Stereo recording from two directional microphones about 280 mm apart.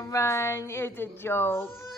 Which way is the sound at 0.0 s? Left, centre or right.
Centre.